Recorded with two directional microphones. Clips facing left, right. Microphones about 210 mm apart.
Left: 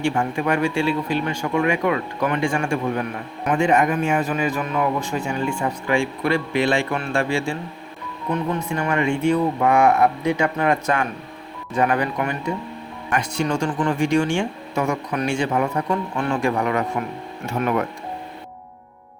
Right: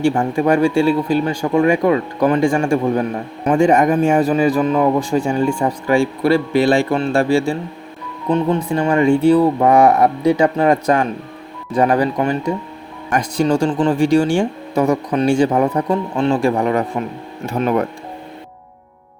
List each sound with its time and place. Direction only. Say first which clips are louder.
0.0 s speech: right 6 dB; 35° right (ahead or behind)